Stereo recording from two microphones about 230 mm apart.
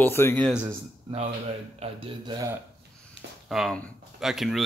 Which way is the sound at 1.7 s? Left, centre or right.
Right.